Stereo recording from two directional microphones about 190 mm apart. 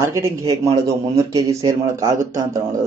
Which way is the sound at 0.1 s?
15° right (ahead or behind).